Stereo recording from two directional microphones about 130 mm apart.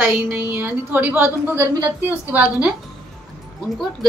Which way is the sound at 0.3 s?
20° right (ahead or behind).